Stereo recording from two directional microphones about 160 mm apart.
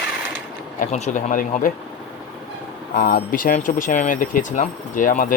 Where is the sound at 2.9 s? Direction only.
65° left (ahead or behind).